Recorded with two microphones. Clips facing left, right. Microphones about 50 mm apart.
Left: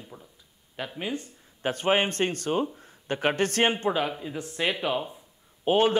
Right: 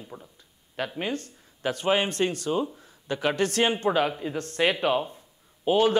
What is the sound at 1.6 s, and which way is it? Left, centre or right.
A man's voice, left.